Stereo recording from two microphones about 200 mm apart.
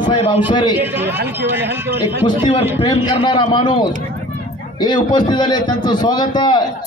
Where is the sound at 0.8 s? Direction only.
10° right (ahead or behind).